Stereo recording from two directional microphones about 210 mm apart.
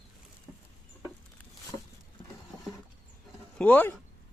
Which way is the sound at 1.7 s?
25° left (ahead or behind).